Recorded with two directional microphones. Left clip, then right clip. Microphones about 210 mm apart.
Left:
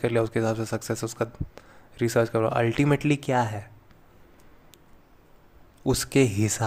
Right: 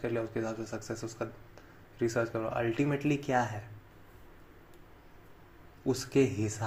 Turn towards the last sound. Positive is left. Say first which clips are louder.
# left 6 dB
turn(degrees=40)  # may be behind; listen again after turning